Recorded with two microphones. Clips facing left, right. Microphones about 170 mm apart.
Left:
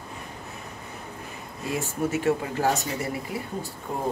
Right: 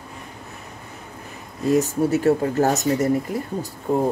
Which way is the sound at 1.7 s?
40° right (ahead or behind).